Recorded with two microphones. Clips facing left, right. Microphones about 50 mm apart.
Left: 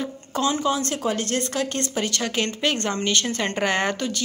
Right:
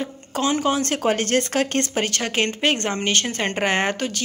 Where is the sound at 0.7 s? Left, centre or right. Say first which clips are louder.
Right 4 dB; right.